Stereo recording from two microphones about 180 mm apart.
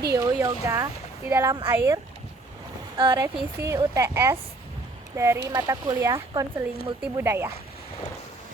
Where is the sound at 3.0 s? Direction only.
25° right (ahead or behind).